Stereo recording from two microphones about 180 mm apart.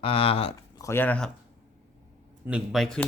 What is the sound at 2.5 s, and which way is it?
Speech, 5° right (ahead or behind).